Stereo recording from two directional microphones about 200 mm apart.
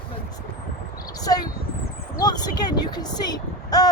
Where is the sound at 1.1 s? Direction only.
20° left (ahead or behind).